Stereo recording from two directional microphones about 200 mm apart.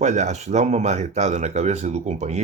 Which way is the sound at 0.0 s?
35° right (ahead or behind).